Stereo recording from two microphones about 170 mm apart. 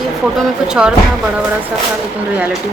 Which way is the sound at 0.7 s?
5° right (ahead or behind).